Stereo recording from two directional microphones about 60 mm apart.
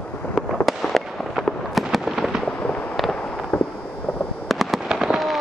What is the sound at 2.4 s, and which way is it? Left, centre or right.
Fireworks, centre.